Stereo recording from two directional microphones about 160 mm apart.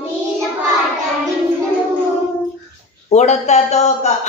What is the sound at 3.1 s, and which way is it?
Speech, 45° left (ahead or behind).